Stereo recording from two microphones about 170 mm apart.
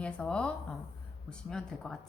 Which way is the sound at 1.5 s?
5° left (ahead or behind).